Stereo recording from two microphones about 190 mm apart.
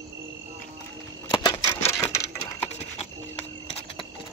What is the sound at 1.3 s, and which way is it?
Typewriter, 20° left (ahead or behind).